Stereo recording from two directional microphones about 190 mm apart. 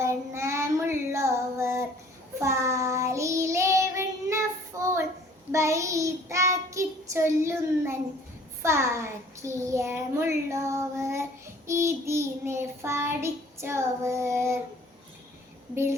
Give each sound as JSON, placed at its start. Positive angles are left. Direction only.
{"t": 0.0, "sound": "child singing", "side_deg": -15}
{"t": 8.6, "sound": "a child's voice", "side_deg": -15}
{"t": 15.7, "sound": "a child's voice", "side_deg": -15}